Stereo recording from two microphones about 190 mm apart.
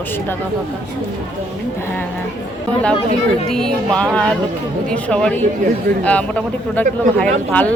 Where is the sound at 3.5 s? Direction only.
5° left (ahead or behind).